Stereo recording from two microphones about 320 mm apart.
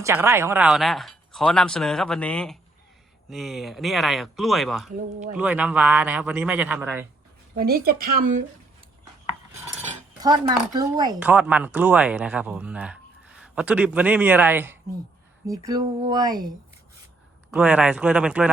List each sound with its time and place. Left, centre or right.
0.0 s speech: centre
4.9 s speech: right
5.3 s speech: centre
7.5 s speech: right
10.2 s speech: centre